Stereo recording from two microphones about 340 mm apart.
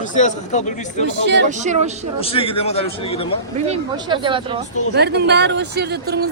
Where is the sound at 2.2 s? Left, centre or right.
Centre.